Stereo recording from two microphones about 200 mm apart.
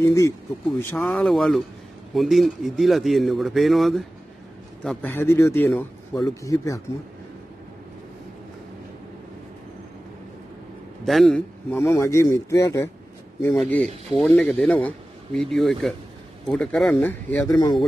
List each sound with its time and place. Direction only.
0.0 s speech: 15° left (ahead or behind)
5.7 s a man's voice: centre (ahead or behind)
6.4 s speech: 15° left (ahead or behind)
11.1 s speech: centre (ahead or behind)
11.7 s speech: 15° left (ahead or behind)
13.6 s speech: 5° left (ahead or behind); by 17.8 s 20° left (ahead or behind)